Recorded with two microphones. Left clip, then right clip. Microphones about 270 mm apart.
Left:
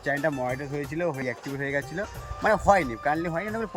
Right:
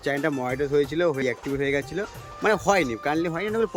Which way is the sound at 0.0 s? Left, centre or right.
Centre.